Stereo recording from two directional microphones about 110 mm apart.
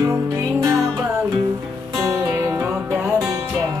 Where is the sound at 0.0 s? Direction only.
30° right (ahead or behind).